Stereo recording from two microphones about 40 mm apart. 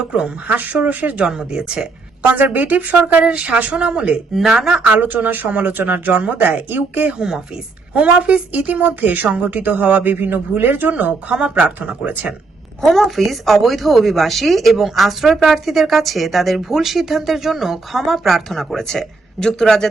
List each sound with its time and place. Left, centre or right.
0.0 s speech: centre
0.4 s speech: right
1.2 s speech: right
2.2 s speech: right
4.4 s speech: centre
4.9 s speech: right
7.2 s speech: centre
7.9 s speech: right
8.5 s speech: right
11.3 s speech: right
11.6 s speech: right
12.8 s speech: centre
18.8 s speech: centre